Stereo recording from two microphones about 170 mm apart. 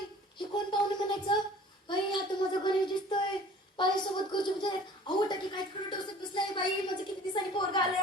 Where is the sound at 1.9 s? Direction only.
25° left (ahead or behind).